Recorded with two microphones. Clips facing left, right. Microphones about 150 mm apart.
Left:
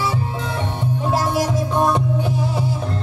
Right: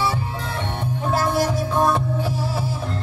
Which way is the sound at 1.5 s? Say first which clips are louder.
Left 1 dB; 20° left (ahead or behind).